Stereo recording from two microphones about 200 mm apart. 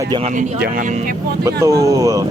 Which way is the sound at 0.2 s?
35° right (ahead or behind).